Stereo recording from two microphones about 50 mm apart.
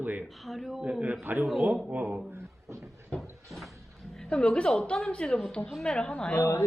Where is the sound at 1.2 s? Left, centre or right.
Right.